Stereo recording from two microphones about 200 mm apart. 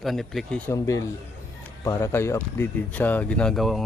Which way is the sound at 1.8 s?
15° left (ahead or behind).